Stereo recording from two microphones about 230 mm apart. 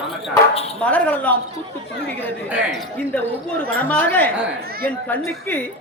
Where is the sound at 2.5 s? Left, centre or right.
Centre.